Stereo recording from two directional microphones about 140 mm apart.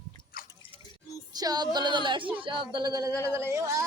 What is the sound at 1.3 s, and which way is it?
Female singing, 30° right (ahead or behind).